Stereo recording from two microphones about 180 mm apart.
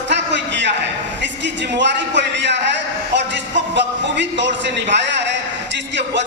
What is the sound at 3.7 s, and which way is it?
A man's voice, 75° right (ahead or behind).